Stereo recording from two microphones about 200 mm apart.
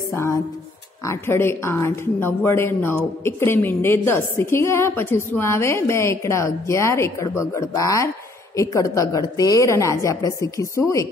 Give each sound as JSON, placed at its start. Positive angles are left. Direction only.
{"t": 0.1, "sound": "a woman's voice", "side_deg": 15}